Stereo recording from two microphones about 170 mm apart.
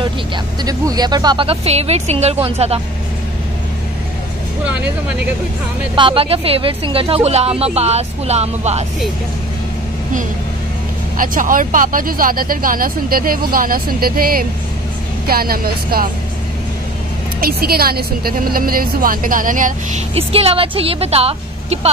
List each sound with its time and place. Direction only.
0.7 s speech: 20° right (ahead or behind); by 2.8 s 40° right (ahead or behind)
5.9 s speech: 30° right (ahead or behind)
11.1 s speech: 55° right (ahead or behind)
17.4 s speech: 60° right (ahead or behind)
20.2 s speech: 35° right (ahead or behind)